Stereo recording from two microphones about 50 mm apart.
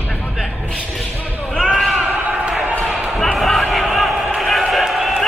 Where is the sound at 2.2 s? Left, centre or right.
Right.